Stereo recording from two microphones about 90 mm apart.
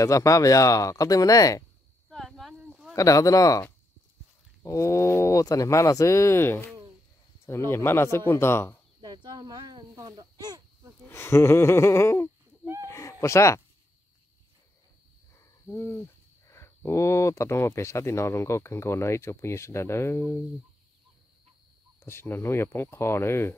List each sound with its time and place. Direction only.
0.0 s speech: 35° left (ahead or behind)
2.0 s a sound: 5° left (ahead or behind)
3.0 s speech: 40° left (ahead or behind)
4.6 s speech: 35° left (ahead or behind)
9.0 s a sound: 55° right (ahead or behind)
11.1 s speech: 30° left (ahead or behind)
12.8 s chicken: 35° left (ahead or behind)
15.3 s hoot: 30° left (ahead or behind)
16.4 s speech: 30° left (ahead or behind)
22.0 s speech: 25° left (ahead or behind)